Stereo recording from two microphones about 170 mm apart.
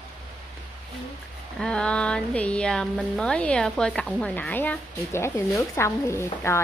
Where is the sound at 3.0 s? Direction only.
5° left (ahead or behind).